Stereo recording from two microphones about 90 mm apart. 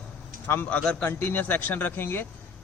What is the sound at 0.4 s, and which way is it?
A man's voice, 20° left (ahead or behind).